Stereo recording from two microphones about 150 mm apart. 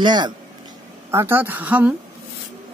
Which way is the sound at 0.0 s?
30° right (ahead or behind).